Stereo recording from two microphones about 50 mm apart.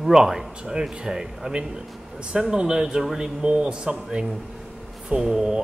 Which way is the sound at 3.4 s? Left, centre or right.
Centre.